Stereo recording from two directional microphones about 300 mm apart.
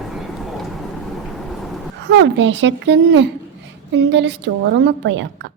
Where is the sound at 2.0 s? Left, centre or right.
Right.